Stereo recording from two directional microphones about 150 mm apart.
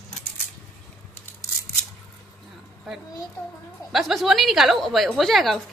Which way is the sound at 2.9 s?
Centre (ahead or behind).